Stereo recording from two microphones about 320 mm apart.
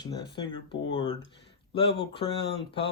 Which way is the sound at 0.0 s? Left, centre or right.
Centre.